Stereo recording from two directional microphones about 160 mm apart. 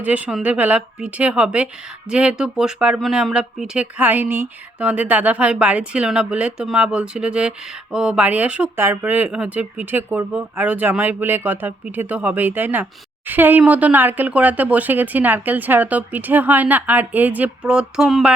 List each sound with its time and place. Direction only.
0.0 s speech: 10° right (ahead or behind)